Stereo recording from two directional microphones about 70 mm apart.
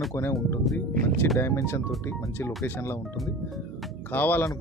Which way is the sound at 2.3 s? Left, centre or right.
Left.